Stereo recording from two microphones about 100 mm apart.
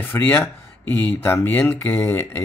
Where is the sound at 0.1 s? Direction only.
20° left (ahead or behind).